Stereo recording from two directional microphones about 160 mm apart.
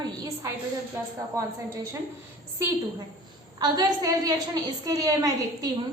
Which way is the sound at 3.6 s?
25° right (ahead or behind).